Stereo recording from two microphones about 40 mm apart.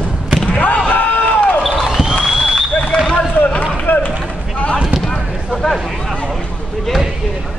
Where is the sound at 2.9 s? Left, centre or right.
Left.